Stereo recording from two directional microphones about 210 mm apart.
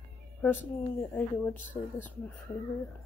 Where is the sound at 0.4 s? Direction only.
10° left (ahead or behind).